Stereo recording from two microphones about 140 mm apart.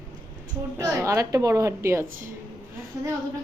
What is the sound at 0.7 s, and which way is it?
A woman's voice, 20° right (ahead or behind).